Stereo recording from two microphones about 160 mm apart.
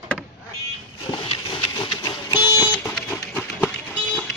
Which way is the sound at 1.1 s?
30° left (ahead or behind).